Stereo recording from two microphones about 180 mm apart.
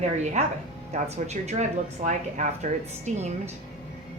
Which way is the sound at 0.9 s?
40° right (ahead or behind).